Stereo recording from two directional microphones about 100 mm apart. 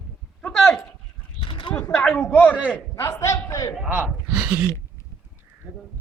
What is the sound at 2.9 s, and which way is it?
Speech, 30° left (ahead or behind).